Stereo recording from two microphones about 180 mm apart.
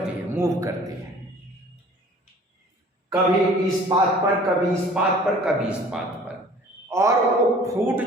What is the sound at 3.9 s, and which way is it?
Speech, 20° right (ahead or behind).